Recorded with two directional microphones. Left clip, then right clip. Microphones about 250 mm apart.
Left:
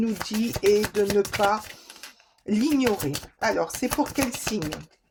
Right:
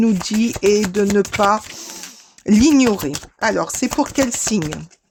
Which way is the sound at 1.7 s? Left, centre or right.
Right.